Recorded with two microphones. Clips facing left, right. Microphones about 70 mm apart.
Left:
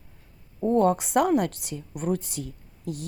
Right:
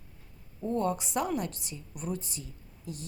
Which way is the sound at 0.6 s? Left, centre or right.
Left.